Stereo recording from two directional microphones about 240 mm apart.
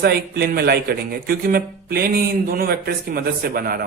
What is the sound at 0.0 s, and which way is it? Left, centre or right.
Speech, right.